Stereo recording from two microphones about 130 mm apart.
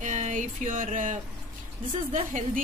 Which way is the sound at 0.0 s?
70° right (ahead or behind).